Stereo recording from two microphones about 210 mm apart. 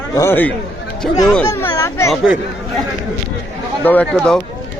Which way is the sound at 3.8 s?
10° left (ahead or behind).